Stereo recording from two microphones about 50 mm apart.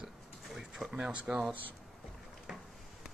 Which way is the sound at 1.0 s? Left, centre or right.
Right.